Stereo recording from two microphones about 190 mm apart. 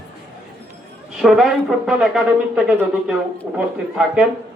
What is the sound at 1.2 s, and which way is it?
Speech, centre (ahead or behind).